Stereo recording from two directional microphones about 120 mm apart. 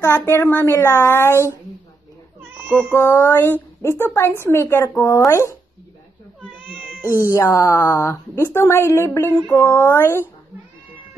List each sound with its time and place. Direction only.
0.0 s speech: 20° left (ahead or behind)
2.5 s cat: 15° right (ahead or behind)
2.9 s speech: 25° left (ahead or behind)
7.3 s speech: 20° left (ahead or behind)